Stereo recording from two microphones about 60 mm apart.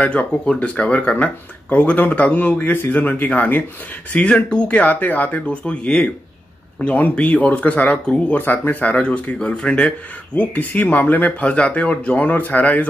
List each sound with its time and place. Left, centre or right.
0.0 s speech: centre
4.1 s speech: centre
5.5 s speech: centre
8.4 s speech: left
8.9 s speech: left